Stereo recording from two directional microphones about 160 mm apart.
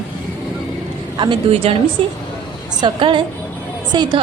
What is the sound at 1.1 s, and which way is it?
A woman's voice, 30° right (ahead or behind).